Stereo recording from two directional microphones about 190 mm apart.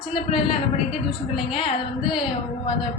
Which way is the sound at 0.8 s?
Centre (ahead or behind).